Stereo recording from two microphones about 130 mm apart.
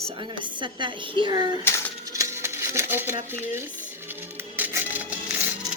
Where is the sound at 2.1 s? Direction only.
25° right (ahead or behind).